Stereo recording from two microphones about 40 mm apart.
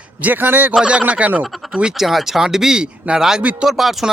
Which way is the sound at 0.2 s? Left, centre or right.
Right.